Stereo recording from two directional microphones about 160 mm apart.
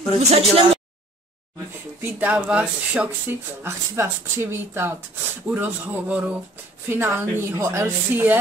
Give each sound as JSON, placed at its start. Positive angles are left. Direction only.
{"t": 0.3, "sound": "speech", "side_deg": -40}
{"t": 2.0, "sound": "speech", "side_deg": -10}